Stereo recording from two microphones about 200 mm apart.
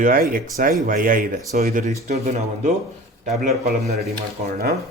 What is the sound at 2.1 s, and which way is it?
Speech, 35° right (ahead or behind).